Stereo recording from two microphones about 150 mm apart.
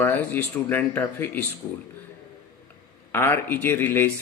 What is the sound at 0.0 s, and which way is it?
Speech, 10° left (ahead or behind).